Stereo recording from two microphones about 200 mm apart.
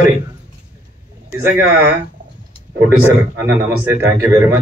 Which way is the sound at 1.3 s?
10° right (ahead or behind).